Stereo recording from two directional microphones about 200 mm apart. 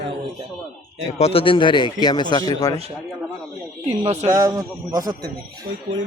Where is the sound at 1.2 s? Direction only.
30° left (ahead or behind).